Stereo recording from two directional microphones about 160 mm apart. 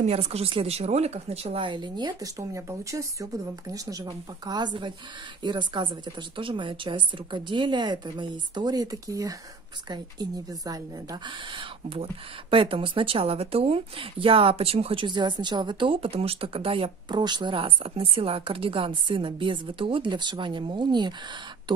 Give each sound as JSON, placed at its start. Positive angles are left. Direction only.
{"t": 0.0, "sound": "a woman's voice", "side_deg": -40}